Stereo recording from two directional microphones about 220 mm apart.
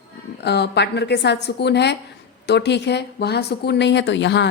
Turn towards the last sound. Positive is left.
turn(degrees=55)  # may be behind; listen again after turning